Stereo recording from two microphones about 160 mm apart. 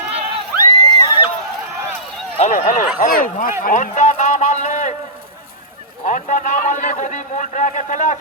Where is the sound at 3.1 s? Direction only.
60° left (ahead or behind).